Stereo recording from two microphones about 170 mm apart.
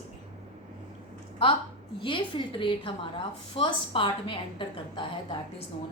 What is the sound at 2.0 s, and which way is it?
A woman's voice, 30° left (ahead or behind).